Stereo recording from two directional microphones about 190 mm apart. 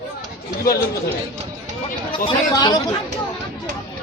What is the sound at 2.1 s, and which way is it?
Speech, 20° left (ahead or behind).